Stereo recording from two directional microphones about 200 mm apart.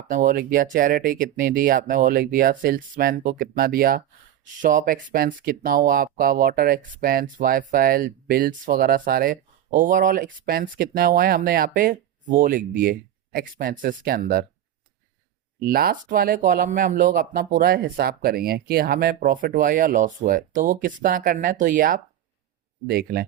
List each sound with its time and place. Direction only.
0.1 s speech: 45° right (ahead or behind)
15.5 s speech: 50° right (ahead or behind)